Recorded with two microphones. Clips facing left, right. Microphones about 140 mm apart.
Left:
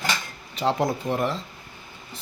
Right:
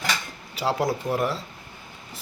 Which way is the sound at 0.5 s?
5° right (ahead or behind).